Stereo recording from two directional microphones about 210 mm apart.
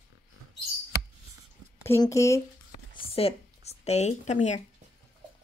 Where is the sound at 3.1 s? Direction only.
30° left (ahead or behind).